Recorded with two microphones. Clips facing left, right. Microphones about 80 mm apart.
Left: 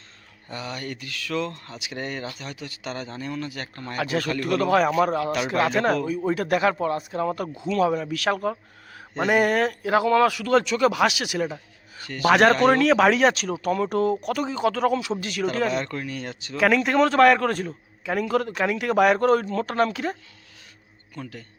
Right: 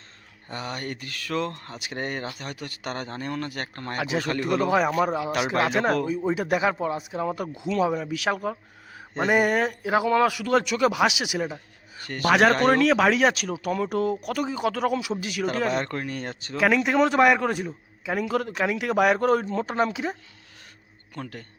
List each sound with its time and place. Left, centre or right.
0.4 s speech: right
3.9 s speech: centre
15.7 s speech: right
16.6 s speech: centre
19.5 s speech: centre
21.2 s speech: right